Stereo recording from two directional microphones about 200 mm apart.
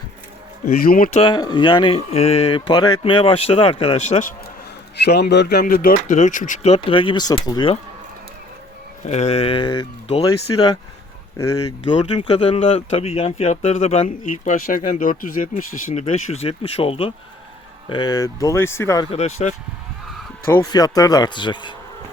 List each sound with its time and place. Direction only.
0.8 s speech: 45° left (ahead or behind)
1.2 s speech: 20° left (ahead or behind); by 4.4 s 40° left (ahead or behind)
5.0 s speech: 55° left (ahead or behind); by 7.8 s 20° left (ahead or behind)
9.0 s speech: 30° left (ahead or behind); by 19.0 s 15° left (ahead or behind)
19.1 s speech: 35° left (ahead or behind)
20.5 s speech: 15° left (ahead or behind)